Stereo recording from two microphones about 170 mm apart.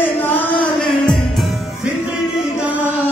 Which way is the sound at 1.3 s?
Centre (ahead or behind).